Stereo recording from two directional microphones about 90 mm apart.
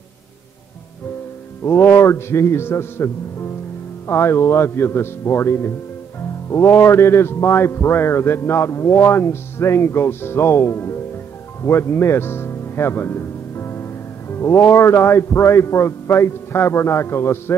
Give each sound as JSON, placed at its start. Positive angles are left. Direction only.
{"t": 1.6, "sound": "a man's voice", "side_deg": 25}
{"t": 11.6, "sound": "music", "side_deg": 30}
{"t": 14.3, "sound": "a man's voice", "side_deg": 30}